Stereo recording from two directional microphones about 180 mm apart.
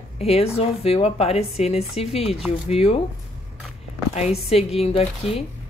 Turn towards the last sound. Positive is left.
turn(degrees=35)  # may be behind; listen again after turning